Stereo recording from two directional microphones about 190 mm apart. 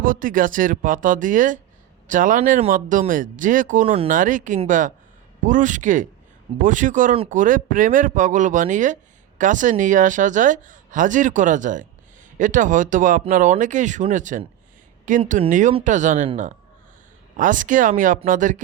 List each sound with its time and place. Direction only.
0.0 s a woman's voice: 45° right (ahead or behind)